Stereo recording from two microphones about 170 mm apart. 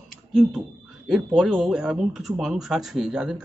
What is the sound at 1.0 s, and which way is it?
Speech, centre (ahead or behind).